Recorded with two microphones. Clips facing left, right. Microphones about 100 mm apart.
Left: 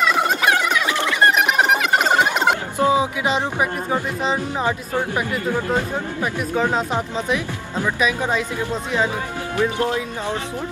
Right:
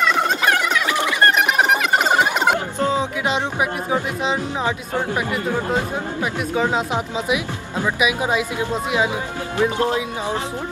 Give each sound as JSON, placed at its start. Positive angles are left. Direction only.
{"t": 0.0, "sound": "a sound", "side_deg": 5}
{"t": 2.8, "sound": "music", "side_deg": 10}
{"t": 3.3, "sound": "speech", "side_deg": 0}
{"t": 6.2, "sound": "speech", "side_deg": -5}